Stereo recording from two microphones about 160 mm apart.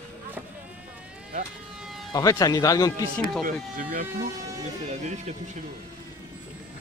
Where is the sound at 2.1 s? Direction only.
25° left (ahead or behind).